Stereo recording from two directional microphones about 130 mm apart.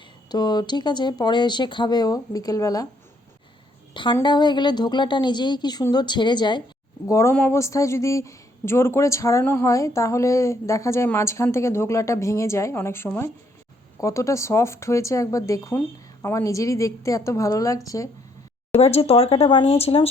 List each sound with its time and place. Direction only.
0.3 s speech: 30° left (ahead or behind)
3.9 s speech: 35° left (ahead or behind)
7.1 s a woman's voice: 25° left (ahead or behind)
18.7 s speech: 50° left (ahead or behind)